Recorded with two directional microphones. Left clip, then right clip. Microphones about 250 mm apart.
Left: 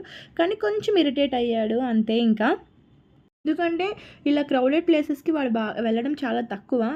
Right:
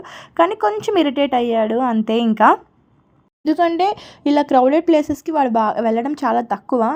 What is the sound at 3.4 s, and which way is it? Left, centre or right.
Speech, centre.